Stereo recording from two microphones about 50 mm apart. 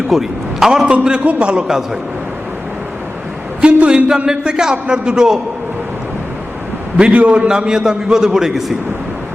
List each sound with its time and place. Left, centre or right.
0.1 s a man's voice: centre
0.7 s a man's voice: centre
1.2 s a man's voice: right
3.6 s a man's voice: right
6.9 s a man's voice: right
7.4 s a man's voice: centre